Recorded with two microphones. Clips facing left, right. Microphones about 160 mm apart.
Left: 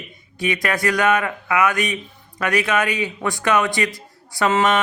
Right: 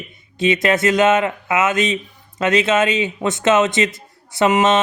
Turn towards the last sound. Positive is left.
turn(degrees=-20)  # may be behind; listen again after turning